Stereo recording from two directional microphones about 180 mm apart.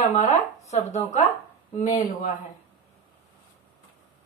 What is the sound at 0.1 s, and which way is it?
A woman's voice, 40° left (ahead or behind).